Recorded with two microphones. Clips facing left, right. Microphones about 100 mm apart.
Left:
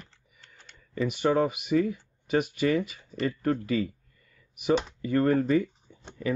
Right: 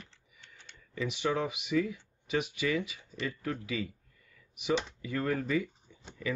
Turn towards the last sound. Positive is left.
turn(degrees=40)  # may be behind; listen again after turning